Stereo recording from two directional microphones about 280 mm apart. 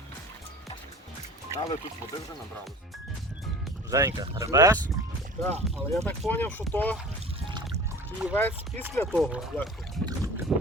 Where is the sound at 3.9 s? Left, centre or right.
Centre.